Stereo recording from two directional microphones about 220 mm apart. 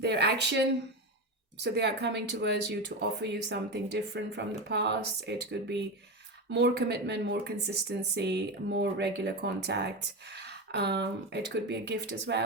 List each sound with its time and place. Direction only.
0.0 s speech: 50° right (ahead or behind)